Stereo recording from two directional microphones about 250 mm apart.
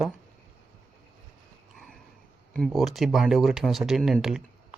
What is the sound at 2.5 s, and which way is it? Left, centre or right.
Speech, centre.